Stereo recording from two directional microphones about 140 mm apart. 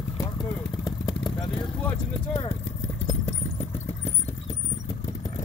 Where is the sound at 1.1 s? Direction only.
30° left (ahead or behind).